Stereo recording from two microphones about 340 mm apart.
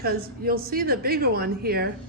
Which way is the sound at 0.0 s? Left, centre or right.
Right.